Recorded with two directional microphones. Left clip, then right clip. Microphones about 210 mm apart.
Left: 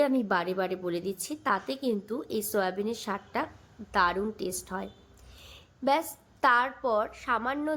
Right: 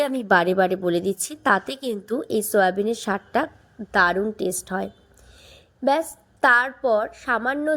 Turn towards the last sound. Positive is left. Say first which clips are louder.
# right 7 dB
turn(degrees=-20)  # may be behind; listen again after turning